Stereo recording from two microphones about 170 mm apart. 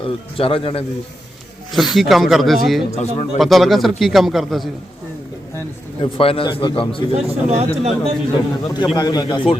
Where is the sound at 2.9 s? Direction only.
40° left (ahead or behind).